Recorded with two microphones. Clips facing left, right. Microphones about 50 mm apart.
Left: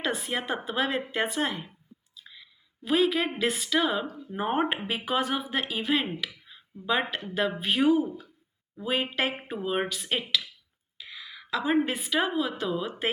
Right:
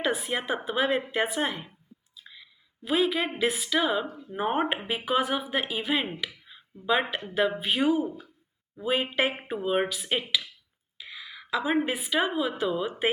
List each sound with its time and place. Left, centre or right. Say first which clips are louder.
0.0 s a woman's voice: right 2 dB; centre